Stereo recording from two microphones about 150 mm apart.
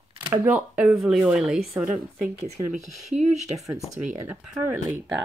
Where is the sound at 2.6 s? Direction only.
25° right (ahead or behind).